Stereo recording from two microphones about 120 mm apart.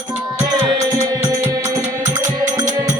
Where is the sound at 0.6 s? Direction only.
30° right (ahead or behind).